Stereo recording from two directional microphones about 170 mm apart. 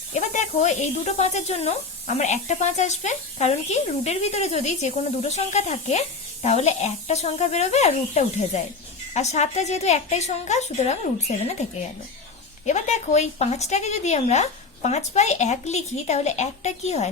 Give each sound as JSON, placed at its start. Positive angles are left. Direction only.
{"t": 0.1, "sound": "speech", "side_deg": 45}
{"t": 12.6, "sound": "a woman's voice", "side_deg": 45}